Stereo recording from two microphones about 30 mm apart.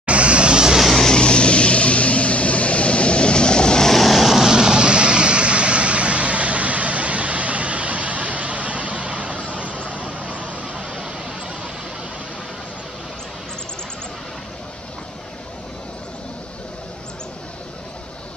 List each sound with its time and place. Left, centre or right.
0.0 s vehicle: right
1.1 s vehicle: left
4.0 s vehicle: centre
4.5 s vehicle: right